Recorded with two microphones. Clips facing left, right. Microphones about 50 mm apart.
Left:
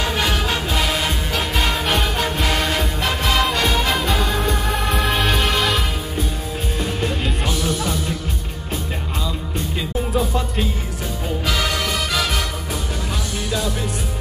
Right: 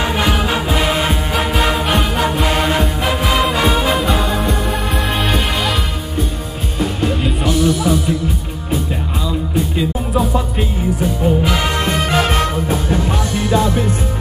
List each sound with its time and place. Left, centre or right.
0.0 s music: centre
1.5 s music: centre
7.0 s music: centre
9.8 s music: centre
11.4 s music: right